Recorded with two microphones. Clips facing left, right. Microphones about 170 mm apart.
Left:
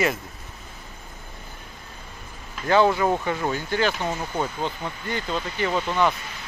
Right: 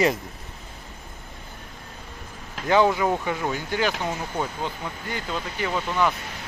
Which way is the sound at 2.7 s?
15° right (ahead or behind).